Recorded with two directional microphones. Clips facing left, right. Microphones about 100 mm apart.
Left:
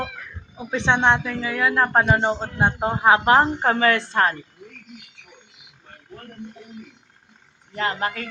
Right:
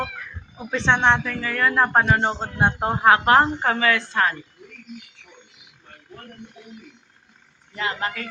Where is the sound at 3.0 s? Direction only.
20° left (ahead or behind).